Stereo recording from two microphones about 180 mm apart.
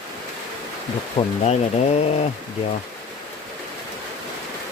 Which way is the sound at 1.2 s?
35° left (ahead or behind).